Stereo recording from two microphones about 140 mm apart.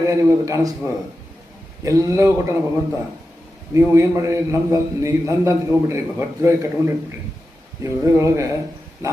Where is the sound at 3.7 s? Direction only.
20° right (ahead or behind).